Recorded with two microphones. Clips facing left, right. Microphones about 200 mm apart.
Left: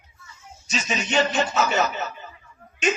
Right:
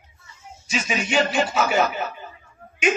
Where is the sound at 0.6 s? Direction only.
10° right (ahead or behind).